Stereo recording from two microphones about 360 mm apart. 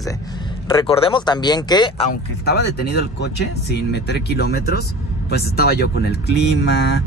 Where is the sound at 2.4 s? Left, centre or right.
Left.